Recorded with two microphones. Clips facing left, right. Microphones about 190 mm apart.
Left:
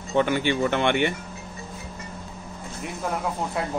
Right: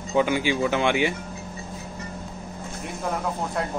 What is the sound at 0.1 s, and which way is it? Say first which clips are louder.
A man's voice: even; 10° right (ahead or behind).